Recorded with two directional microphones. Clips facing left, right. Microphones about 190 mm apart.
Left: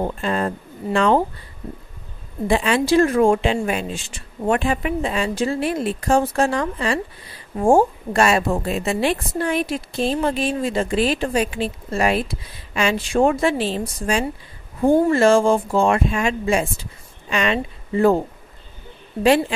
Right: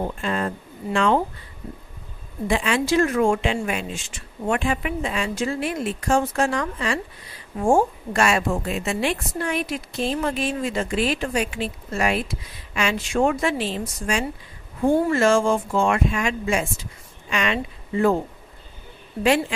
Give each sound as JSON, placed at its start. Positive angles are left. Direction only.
{"t": 0.0, "sound": "a woman's voice", "side_deg": 35}
{"t": 2.4, "sound": "a woman's voice", "side_deg": 35}